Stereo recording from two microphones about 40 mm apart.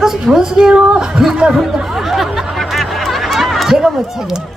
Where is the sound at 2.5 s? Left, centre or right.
Centre.